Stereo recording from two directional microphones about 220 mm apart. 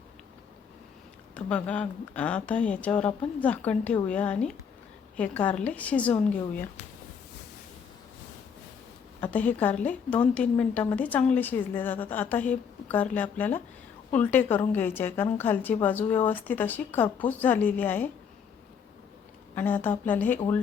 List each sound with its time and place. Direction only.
1.5 s a woman's voice: 5° left (ahead or behind)
9.2 s a woman's voice: 5° left (ahead or behind)
19.5 s a woman's voice: 10° left (ahead or behind)